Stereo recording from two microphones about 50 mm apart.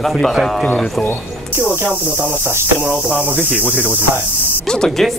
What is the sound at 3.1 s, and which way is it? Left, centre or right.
Speech, right.